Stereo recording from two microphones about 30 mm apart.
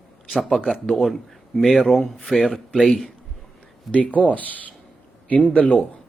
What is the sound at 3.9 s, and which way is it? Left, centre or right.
Speech, left.